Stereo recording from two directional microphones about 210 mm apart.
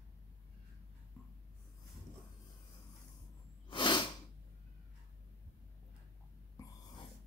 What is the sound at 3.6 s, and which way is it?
Sneeze, 20° left (ahead or behind).